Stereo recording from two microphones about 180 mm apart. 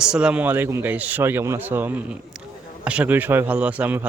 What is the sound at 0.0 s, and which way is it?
A man's voice, 5° right (ahead or behind).